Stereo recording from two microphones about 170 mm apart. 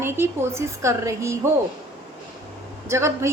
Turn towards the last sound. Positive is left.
turn(degrees=-15)  # may be behind; listen again after turning